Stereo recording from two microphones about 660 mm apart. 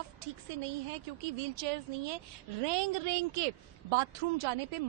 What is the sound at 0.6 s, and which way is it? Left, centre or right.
A woman's voice, right.